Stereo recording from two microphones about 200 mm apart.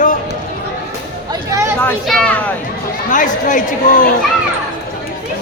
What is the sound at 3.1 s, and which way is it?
Speech, 40° left (ahead or behind).